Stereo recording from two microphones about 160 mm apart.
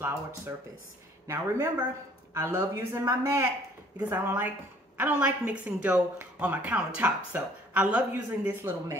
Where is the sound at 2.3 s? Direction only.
15° right (ahead or behind).